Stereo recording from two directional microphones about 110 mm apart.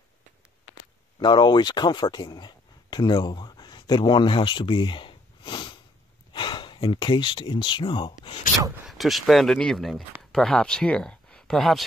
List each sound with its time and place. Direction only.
1.2 s speech: 45° left (ahead or behind)
8.8 s speech: centre (ahead or behind)